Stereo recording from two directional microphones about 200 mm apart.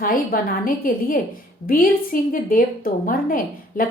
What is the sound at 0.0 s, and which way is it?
A woman's voice, 45° left (ahead or behind).